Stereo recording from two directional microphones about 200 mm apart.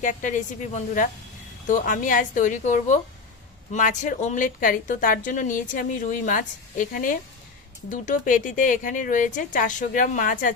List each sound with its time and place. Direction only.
0.0 s a woman's voice: 40° left (ahead or behind)